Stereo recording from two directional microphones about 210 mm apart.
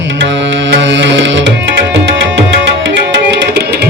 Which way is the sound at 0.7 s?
55° right (ahead or behind).